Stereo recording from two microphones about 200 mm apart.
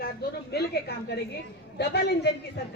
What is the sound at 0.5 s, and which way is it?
A woman's voice, 55° left (ahead or behind).